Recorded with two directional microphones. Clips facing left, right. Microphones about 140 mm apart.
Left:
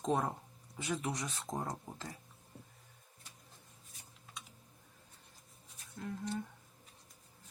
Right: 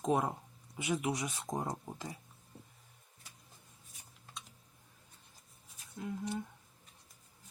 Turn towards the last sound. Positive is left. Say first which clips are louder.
# right 1 dB
turn(degrees=-10)  # may be behind; listen again after turning